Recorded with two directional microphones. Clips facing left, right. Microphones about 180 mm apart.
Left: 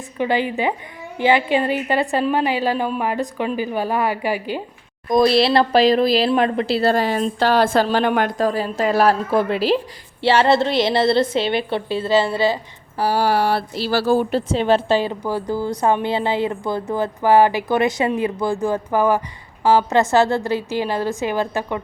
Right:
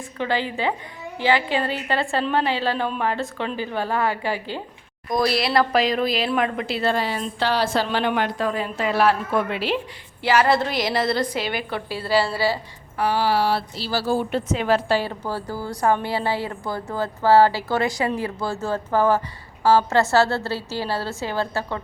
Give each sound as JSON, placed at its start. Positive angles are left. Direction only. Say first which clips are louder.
{"t": 0.2, "sound": "a woman's voice", "louder": "left 4 dB", "side_deg": 15}
{"t": 13.0, "sound": "a sound", "louder": "left 3 dB", "side_deg": 40}
{"t": 14.3, "sound": "a woman's voice", "louder": "left 4 dB", "side_deg": 30}